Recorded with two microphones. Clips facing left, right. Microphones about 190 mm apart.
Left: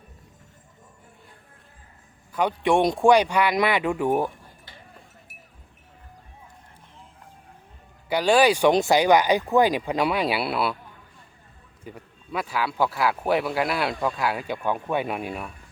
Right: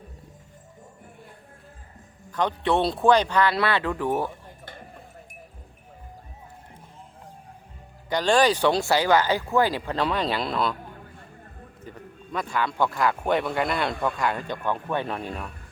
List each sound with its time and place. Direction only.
2.3 s speech: 10° left (ahead or behind)
8.1 s speech: 10° left (ahead or behind)
10.9 s a sound: 55° right (ahead or behind)
11.9 s speech: 10° left (ahead or behind)